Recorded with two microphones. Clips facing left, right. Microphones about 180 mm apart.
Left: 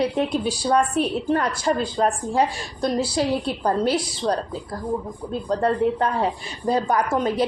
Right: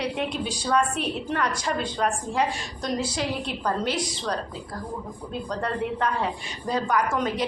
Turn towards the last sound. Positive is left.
turn(degrees=35)  # may be behind; listen again after turning